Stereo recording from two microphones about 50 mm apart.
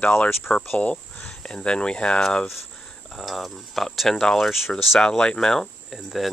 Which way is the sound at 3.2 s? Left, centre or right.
Centre.